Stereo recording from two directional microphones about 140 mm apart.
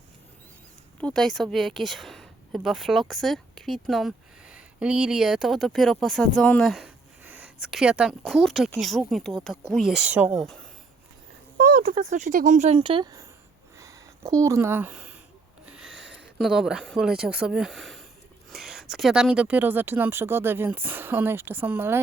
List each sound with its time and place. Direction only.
0.9 s speech: 5° left (ahead or behind); by 10.4 s 10° right (ahead or behind)
11.5 s a sound: 90° right
12.0 s speech: 60° right (ahead or behind); by 15.0 s 15° right (ahead or behind)
15.6 s snort: 5° right (ahead or behind)
16.4 s speech: 5° right (ahead or behind)